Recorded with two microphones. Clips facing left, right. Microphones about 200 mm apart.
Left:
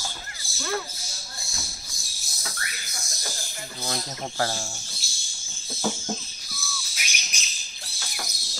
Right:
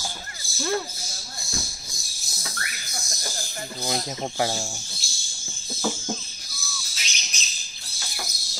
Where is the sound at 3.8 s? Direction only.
15° right (ahead or behind).